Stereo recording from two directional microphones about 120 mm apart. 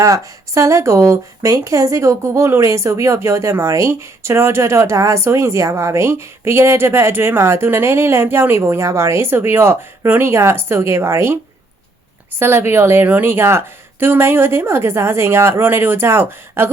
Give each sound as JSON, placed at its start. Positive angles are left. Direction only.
{"t": 0.0, "sound": "a woman's voice", "side_deg": -25}
{"t": 12.4, "sound": "a woman's voice", "side_deg": -20}